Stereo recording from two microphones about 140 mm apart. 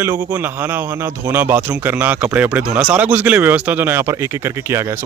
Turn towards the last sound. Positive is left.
turn(degrees=-20)  # may be behind; listen again after turning